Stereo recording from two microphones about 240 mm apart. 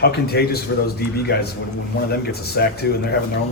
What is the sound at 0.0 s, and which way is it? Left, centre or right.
Speech, left.